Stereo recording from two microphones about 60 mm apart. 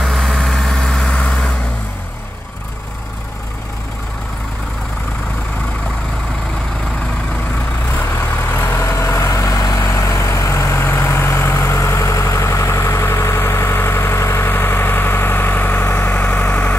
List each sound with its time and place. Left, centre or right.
0.0 s vehicle: centre
8.0 s vehicle: left
8.8 s vehicle: left